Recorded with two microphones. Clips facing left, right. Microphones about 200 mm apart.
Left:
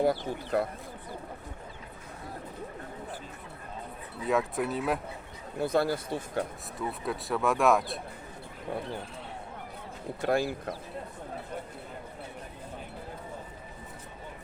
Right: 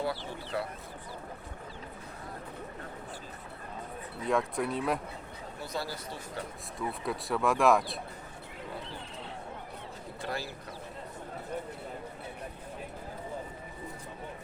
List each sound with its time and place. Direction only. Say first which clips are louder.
0.0 s speech: left 7 dB; 45° left (ahead or behind)
4.3 s speech: left 1 dB; 5° left (ahead or behind)
5.5 s speech: left 11 dB; 55° left (ahead or behind)
6.7 s speech: left 1 dB; centre (ahead or behind)
10.2 s speech: left 10 dB; 50° left (ahead or behind)